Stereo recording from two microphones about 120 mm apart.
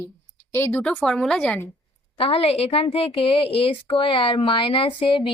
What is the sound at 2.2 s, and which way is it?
A woman's voice, 55° left (ahead or behind).